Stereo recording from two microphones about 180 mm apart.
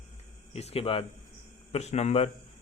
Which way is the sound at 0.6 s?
35° left (ahead or behind).